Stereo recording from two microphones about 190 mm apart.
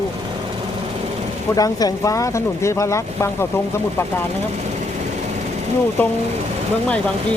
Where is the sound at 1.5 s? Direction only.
20° left (ahead or behind).